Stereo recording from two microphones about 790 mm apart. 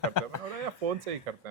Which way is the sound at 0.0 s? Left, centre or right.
Left.